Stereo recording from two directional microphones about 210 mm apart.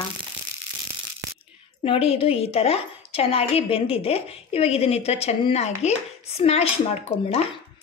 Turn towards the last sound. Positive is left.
turn(degrees=30)  # may be behind; listen again after turning